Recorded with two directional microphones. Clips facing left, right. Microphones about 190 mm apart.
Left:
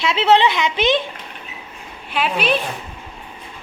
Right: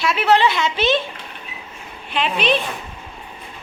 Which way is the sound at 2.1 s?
5° left (ahead or behind).